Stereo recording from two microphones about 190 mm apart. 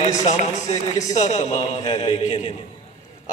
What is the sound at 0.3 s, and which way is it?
A man's voice, 40° left (ahead or behind).